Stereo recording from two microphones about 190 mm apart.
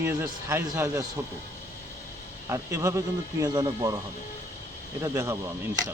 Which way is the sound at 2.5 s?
15° right (ahead or behind).